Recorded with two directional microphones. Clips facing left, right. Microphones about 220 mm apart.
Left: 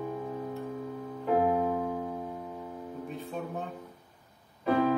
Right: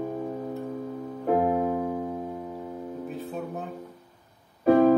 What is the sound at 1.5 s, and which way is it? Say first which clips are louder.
Music: right 3 dB; 50° right (ahead or behind).